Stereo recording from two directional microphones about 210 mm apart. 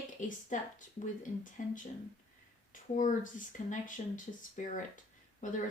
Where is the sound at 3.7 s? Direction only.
40° left (ahead or behind).